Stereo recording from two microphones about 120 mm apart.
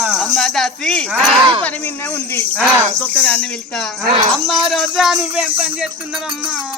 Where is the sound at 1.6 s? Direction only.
15° left (ahead or behind).